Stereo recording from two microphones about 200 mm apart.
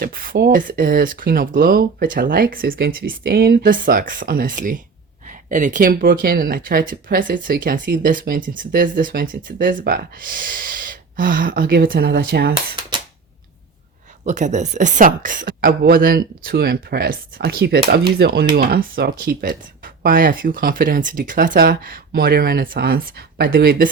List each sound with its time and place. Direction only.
0.0 s speech: 45° right (ahead or behind)
14.3 s speech: 35° right (ahead or behind)